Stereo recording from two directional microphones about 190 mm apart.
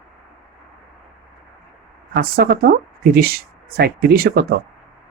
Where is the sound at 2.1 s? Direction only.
55° right (ahead or behind).